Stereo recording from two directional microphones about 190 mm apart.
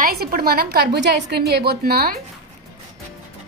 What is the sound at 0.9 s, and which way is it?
A woman's voice, 65° right (ahead or behind).